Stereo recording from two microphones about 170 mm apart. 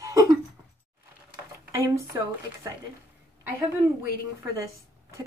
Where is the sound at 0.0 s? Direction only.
20° right (ahead or behind).